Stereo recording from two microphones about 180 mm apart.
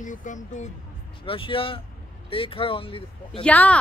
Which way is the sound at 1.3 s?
30° left (ahead or behind).